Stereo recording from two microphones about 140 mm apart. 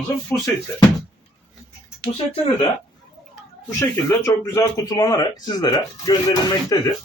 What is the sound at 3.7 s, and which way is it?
Speech, 20° left (ahead or behind).